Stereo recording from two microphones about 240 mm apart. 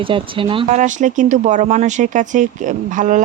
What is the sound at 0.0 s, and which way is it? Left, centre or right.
Speech, right.